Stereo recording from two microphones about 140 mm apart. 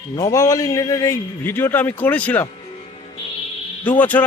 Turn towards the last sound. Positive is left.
turn(degrees=10)  # may be behind; listen again after turning